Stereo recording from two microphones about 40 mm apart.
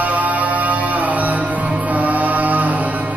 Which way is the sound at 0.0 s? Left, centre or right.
Right.